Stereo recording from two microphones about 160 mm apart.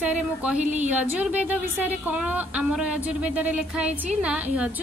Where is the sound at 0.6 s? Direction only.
45° right (ahead or behind).